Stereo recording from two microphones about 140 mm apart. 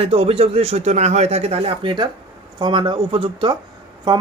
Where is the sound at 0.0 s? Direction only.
45° right (ahead or behind).